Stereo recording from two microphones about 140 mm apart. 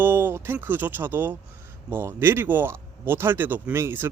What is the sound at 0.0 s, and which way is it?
Speech, 15° right (ahead or behind).